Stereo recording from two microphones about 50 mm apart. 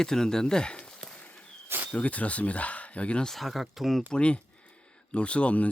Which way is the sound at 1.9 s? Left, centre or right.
Left.